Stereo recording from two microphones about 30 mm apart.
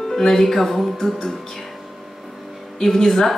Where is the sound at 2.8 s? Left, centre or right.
Centre.